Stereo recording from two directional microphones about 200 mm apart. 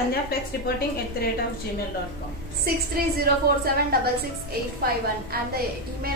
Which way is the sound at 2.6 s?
50° right (ahead or behind).